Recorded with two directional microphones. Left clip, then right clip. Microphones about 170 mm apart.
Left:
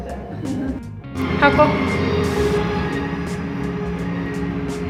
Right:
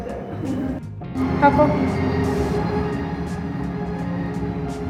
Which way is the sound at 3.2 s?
Centre (ahead or behind).